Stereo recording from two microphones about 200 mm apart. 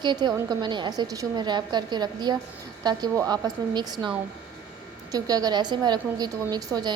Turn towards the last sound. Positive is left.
turn(degrees=-20)  # may be behind; listen again after turning